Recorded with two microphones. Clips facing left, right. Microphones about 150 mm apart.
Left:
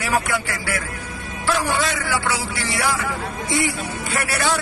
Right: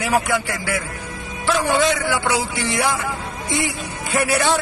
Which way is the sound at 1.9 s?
20° right (ahead or behind).